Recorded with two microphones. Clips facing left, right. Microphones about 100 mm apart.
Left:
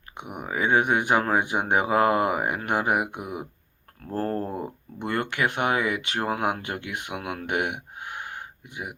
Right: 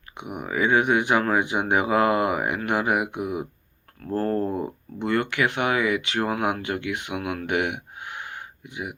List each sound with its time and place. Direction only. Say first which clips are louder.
0.3 s speech: right 1 dB; 40° left (ahead or behind)
4.1 s speech: right 3 dB; 15° left (ahead or behind)
5.0 s speech: right 3 dB; 45° left (ahead or behind)
7.4 s a sound: even; 45° left (ahead or behind)